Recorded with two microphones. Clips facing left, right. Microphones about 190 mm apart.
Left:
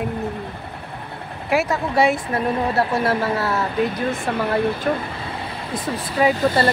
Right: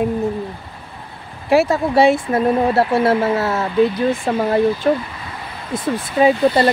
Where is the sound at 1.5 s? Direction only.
30° right (ahead or behind).